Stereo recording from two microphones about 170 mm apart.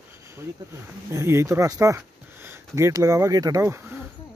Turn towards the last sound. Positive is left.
turn(degrees=-20)  # may be behind; listen again after turning